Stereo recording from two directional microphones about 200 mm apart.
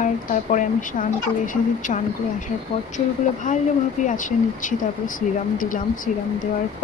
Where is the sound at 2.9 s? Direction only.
40° left (ahead or behind).